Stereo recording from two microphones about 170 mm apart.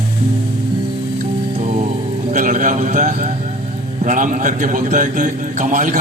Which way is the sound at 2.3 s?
45° right (ahead or behind).